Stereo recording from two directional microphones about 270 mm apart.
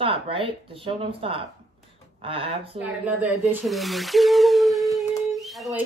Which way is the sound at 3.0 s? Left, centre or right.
Centre.